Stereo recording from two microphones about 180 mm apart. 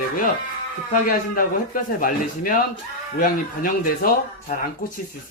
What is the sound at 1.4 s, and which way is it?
Speech, 50° left (ahead or behind).